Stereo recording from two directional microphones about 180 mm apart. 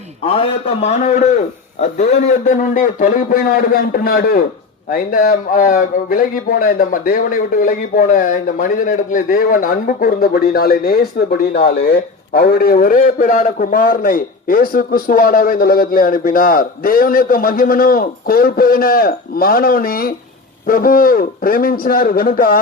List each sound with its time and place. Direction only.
0.3 s a man's voice: 30° left (ahead or behind); by 22.6 s 55° left (ahead or behind)